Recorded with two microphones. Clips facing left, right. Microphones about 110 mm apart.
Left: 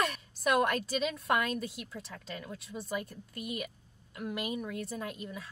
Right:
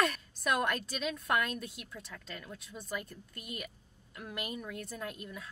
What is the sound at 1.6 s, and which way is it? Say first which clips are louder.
A woman's voice: left 5 dB; 5° left (ahead or behind).